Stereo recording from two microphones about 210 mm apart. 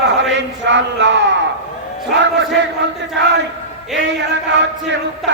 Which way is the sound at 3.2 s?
60° right (ahead or behind).